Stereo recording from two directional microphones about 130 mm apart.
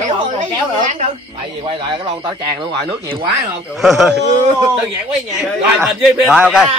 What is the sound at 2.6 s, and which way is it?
Speech, 40° right (ahead or behind).